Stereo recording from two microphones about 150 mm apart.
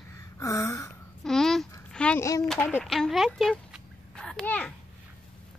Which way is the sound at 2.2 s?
20° left (ahead or behind).